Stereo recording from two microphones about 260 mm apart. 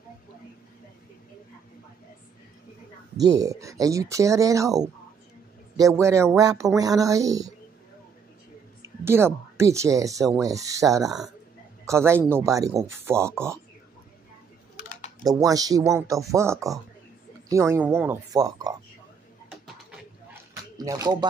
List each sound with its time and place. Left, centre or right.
3.3 s speech: centre
8.8 s a man's voice: centre
14.8 s typing: left
15.2 s speech: centre
20.7 s speech: centre